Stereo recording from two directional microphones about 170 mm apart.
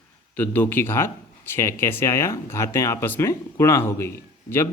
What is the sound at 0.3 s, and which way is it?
Speech, 10° left (ahead or behind).